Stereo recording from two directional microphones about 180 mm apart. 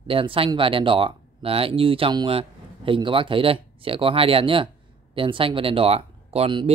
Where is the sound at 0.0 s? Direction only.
30° right (ahead or behind).